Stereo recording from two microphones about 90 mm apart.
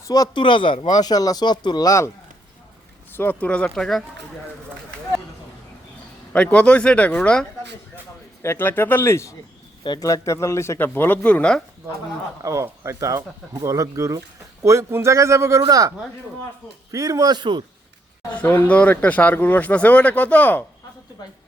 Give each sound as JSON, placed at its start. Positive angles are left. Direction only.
{"t": 0.0, "sound": "speech", "side_deg": 40}
{"t": 0.3, "sound": "speech", "side_deg": 65}
{"t": 0.9, "sound": "speech", "side_deg": 45}
{"t": 3.2, "sound": "speech", "side_deg": 20}
{"t": 3.8, "sound": "speech", "side_deg": 0}
{"t": 6.3, "sound": "speech", "side_deg": 15}
{"t": 8.4, "sound": "speech", "side_deg": 25}
{"t": 12.4, "sound": "speech", "side_deg": -35}
{"t": 15.6, "sound": "a man's voice", "side_deg": -45}
{"t": 16.9, "sound": "a man's voice", "side_deg": -40}
{"t": 18.3, "sound": "speech", "side_deg": 15}